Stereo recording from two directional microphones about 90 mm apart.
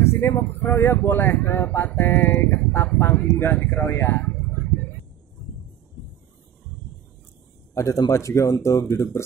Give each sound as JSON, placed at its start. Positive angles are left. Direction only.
{"t": 0.0, "sound": "speech", "side_deg": 30}
{"t": 4.2, "sound": "a sound", "side_deg": 15}
{"t": 7.7, "sound": "speech", "side_deg": 35}